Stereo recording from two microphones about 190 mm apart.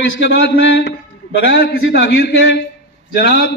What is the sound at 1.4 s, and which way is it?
A man's voice, 60° left (ahead or behind).